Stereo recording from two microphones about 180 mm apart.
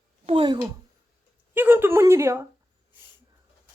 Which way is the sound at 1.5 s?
10° right (ahead or behind).